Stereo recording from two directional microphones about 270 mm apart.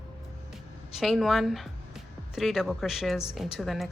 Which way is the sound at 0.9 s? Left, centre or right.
Centre.